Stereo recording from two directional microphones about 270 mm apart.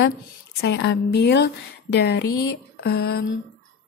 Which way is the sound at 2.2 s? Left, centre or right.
Left.